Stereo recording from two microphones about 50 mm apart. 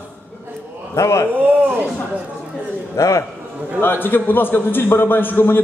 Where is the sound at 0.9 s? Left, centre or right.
Left.